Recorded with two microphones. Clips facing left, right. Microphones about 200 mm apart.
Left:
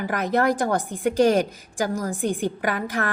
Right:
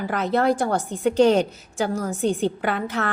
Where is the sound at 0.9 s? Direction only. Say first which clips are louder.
Right 2 dB; 10° left (ahead or behind).